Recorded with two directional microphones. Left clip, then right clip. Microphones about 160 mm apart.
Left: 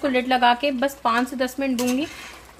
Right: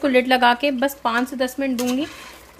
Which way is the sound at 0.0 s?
25° right (ahead or behind).